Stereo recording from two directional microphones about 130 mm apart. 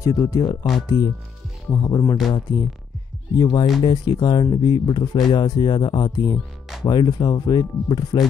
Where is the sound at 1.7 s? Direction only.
30° left (ahead or behind).